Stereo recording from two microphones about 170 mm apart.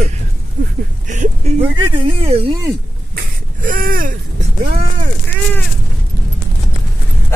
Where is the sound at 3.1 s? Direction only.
55° right (ahead or behind).